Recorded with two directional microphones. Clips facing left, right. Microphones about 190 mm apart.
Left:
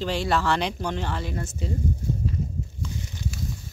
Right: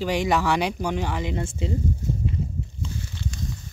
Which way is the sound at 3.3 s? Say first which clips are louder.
Even; 5° left (ahead or behind).